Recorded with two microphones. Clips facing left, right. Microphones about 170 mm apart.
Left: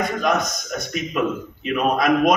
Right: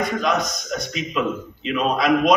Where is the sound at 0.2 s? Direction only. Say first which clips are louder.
Left 1 dB; 50° left (ahead or behind).